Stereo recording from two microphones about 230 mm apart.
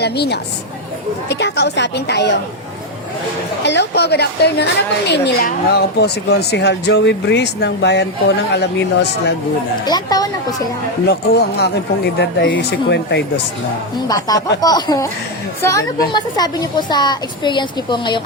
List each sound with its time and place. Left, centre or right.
0.0 s a woman's voice: left
3.6 s a woman's voice: left
9.8 s speech: centre
11.0 s a woman's voice: left
14.1 s a woman's voice: centre